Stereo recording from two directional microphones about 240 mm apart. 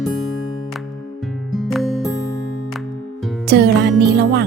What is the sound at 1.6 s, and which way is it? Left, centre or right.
Music, centre.